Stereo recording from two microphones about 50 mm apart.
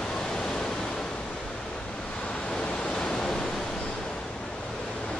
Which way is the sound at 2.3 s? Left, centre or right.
Centre.